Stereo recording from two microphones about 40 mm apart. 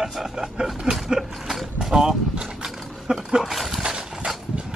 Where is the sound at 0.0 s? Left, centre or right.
Centre.